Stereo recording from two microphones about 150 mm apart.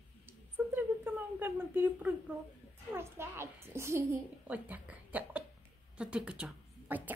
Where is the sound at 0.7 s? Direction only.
15° right (ahead or behind).